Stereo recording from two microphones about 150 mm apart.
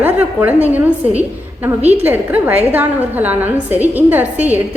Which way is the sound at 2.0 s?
10° right (ahead or behind).